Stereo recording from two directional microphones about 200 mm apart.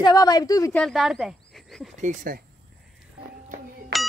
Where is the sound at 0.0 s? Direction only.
20° left (ahead or behind).